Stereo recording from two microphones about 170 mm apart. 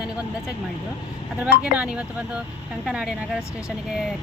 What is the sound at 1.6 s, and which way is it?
Speech, 5° right (ahead or behind).